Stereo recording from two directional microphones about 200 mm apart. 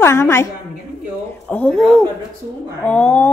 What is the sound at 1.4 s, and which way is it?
Speech, 5° left (ahead or behind).